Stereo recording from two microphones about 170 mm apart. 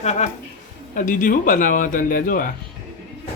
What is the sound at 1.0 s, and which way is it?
Speech, 55° left (ahead or behind).